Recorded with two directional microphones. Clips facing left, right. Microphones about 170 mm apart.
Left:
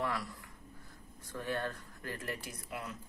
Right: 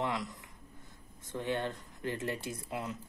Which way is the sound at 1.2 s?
20° right (ahead or behind).